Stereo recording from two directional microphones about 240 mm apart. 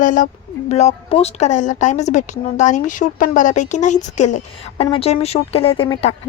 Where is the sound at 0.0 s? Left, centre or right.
Left.